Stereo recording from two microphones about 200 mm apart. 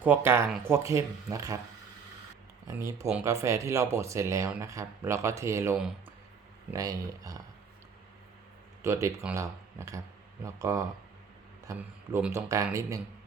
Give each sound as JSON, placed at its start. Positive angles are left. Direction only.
{"t": 0.0, "sound": "speech", "side_deg": -10}
{"t": 2.6, "sound": "speech", "side_deg": -15}
{"t": 8.8, "sound": "speech", "side_deg": -15}